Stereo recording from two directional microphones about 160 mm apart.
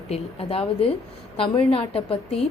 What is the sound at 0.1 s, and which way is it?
A woman's voice, 35° left (ahead or behind).